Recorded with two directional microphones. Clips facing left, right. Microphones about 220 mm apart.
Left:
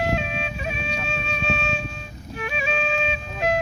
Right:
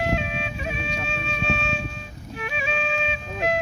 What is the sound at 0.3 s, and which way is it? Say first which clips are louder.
Music: left 1 dB; 45° left (ahead or behind).